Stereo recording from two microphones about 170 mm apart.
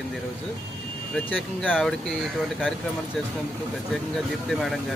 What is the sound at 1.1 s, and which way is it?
Speech, centre (ahead or behind).